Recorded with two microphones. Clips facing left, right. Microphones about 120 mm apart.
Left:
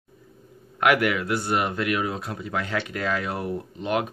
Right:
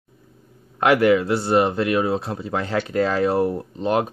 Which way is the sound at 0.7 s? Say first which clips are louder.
Right 5 dB; 30° right (ahead or behind).